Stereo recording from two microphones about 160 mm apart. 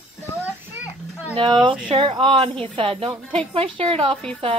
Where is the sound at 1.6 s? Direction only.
30° right (ahead or behind).